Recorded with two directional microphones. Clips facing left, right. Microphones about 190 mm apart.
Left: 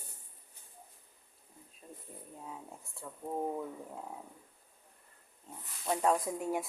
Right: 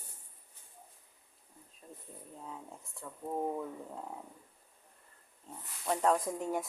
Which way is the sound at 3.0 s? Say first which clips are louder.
Even; 10° left (ahead or behind).